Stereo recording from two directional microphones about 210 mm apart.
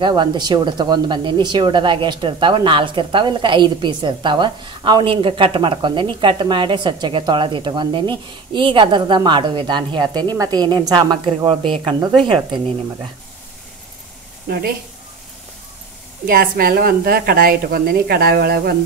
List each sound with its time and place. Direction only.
0.0 s speech: 20° right (ahead or behind)
16.3 s speech: 45° right (ahead or behind)